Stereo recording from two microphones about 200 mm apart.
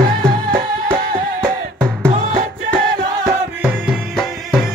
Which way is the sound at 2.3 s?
40° right (ahead or behind).